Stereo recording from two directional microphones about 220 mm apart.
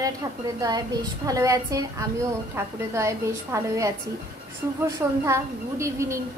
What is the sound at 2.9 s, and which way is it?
Speech, 15° right (ahead or behind).